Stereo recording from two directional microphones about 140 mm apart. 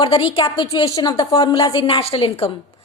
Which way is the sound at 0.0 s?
40° left (ahead or behind).